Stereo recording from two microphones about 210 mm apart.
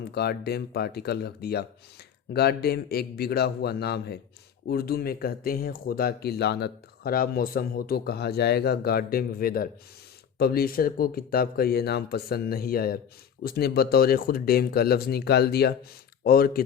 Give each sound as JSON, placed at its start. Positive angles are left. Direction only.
{"t": 0.1, "sound": "speech", "side_deg": 50}